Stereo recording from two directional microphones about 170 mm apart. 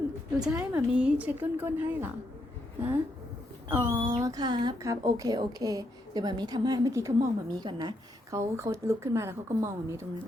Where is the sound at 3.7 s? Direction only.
15° right (ahead or behind).